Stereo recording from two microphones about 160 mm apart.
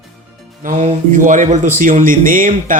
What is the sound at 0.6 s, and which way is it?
Speech, 45° right (ahead or behind).